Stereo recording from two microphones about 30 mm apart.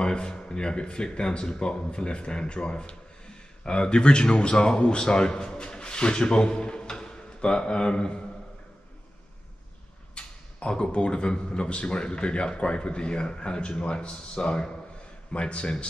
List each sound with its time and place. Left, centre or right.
0.0 s a man's voice: left
10.1 s speech: left